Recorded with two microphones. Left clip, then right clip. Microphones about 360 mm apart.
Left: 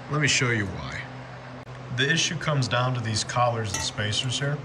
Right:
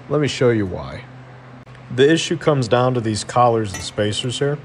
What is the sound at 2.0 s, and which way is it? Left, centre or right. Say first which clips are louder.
Speech: right 9 dB; centre.